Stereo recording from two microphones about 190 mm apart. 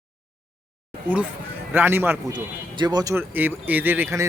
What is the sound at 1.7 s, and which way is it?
Speech, 10° right (ahead or behind).